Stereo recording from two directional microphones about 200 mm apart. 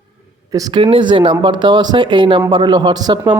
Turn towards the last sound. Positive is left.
turn(degrees=-20)  # may be behind; listen again after turning